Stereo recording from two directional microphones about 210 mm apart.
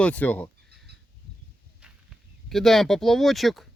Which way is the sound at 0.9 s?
50° right (ahead or behind).